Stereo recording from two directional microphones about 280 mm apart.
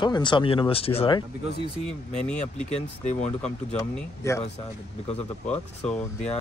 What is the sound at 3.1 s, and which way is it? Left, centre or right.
Speech, left.